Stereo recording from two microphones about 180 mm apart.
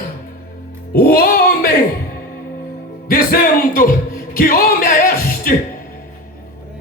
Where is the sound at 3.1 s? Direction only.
55° left (ahead or behind).